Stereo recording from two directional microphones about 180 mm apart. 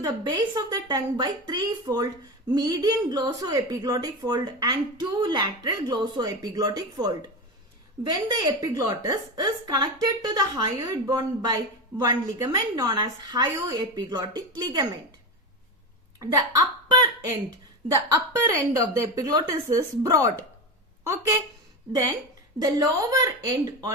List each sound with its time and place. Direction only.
0.0 s a woman's voice: 20° right (ahead or behind)
16.9 s a woman's voice: 20° right (ahead or behind)
22.5 s a woman's voice: 20° right (ahead or behind)